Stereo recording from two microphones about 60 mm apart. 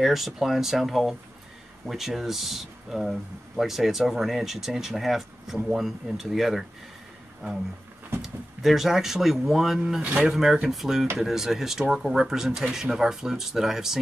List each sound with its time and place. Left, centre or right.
0.0 s speech: centre
8.2 s speech: centre